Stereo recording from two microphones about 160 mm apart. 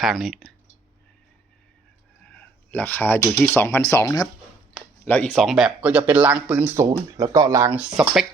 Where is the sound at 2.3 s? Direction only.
10° left (ahead or behind).